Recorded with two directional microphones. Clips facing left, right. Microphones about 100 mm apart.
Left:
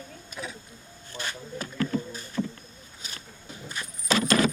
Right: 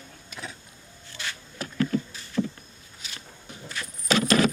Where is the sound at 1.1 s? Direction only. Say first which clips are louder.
Left 3 dB; 45° left (ahead or behind).